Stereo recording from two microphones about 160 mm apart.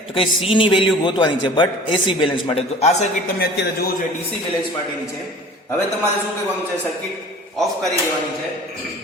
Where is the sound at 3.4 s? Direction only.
70° left (ahead or behind).